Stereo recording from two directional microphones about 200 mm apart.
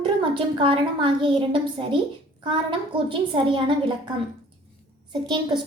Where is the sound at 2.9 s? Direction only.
25° right (ahead or behind).